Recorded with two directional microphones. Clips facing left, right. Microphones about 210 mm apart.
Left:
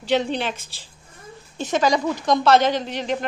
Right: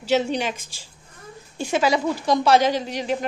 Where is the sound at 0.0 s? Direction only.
10° right (ahead or behind).